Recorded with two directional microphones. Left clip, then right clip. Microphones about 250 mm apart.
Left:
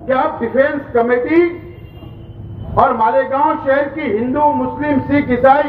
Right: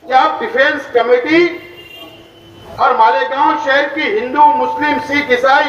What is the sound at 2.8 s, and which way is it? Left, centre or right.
A man's voice, right.